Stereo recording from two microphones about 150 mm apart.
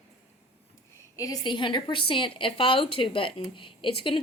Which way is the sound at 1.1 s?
25° left (ahead or behind).